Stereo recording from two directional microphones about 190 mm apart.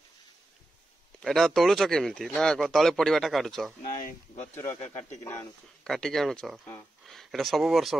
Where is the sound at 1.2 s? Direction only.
Centre (ahead or behind).